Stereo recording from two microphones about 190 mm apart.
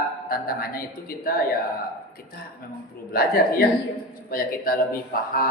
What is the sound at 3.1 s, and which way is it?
Speech, 50° left (ahead or behind).